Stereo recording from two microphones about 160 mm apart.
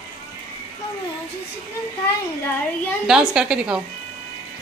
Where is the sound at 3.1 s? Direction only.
5° right (ahead or behind).